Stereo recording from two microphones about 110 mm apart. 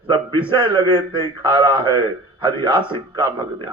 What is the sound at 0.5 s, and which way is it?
A man's voice, 50° right (ahead or behind).